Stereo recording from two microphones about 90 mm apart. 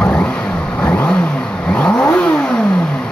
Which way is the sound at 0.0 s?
10° left (ahead or behind).